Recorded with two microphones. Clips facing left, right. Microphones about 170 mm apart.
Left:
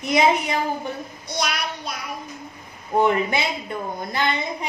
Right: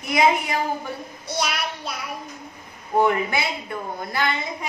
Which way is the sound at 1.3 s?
5° right (ahead or behind).